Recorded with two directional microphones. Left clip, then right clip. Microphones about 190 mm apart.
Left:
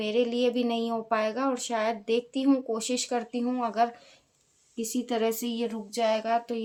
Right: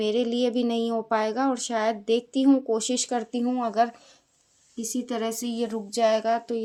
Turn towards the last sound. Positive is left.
turn(degrees=-25)  # may be behind; listen again after turning